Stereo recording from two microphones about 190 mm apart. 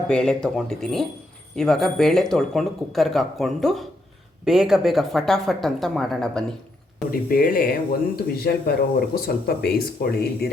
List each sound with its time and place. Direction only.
0.1 s speech: 5° left (ahead or behind)
7.1 s speech: 50° left (ahead or behind)